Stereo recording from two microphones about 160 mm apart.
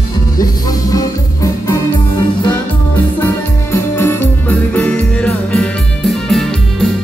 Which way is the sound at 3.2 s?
15° left (ahead or behind).